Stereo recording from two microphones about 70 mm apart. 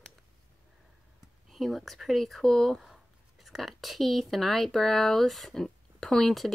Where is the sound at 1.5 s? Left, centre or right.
Centre.